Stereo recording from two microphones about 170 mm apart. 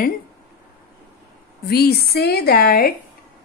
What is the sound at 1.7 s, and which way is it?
A woman's voice, 65° left (ahead or behind).